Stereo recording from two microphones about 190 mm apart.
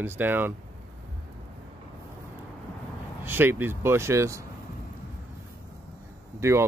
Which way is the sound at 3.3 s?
10° right (ahead or behind).